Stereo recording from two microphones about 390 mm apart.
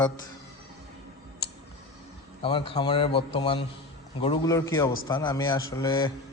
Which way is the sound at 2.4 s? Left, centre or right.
Centre.